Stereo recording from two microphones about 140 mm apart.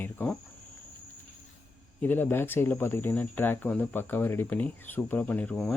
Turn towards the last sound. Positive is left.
turn(degrees=5)  # may be behind; listen again after turning